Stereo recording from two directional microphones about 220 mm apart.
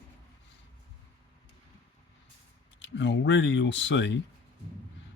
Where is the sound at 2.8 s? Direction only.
55° left (ahead or behind).